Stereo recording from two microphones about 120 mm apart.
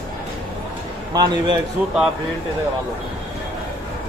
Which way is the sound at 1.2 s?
35° right (ahead or behind).